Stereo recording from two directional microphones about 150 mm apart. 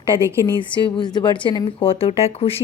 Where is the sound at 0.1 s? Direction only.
35° left (ahead or behind).